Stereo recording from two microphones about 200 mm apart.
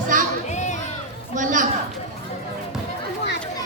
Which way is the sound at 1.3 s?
40° right (ahead or behind).